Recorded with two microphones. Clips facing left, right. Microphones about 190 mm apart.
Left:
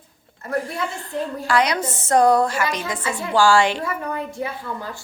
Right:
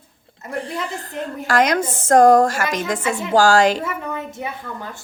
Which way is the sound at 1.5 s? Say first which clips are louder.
Right 3 dB; 45° right (ahead or behind).